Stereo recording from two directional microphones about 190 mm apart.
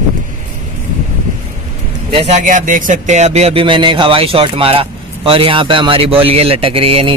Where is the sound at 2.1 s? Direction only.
35° right (ahead or behind).